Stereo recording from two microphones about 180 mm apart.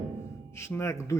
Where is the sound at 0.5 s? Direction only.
15° left (ahead or behind).